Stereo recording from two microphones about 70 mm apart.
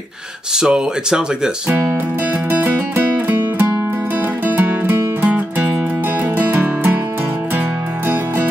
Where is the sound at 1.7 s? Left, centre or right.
Right.